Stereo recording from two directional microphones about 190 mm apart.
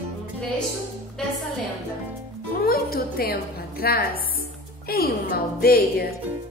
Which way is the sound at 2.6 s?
50° left (ahead or behind).